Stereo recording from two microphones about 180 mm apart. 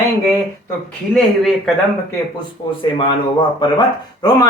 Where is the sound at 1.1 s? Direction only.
Centre (ahead or behind).